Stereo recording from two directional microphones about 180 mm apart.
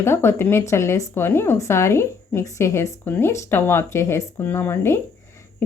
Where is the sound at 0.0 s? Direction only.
15° left (ahead or behind).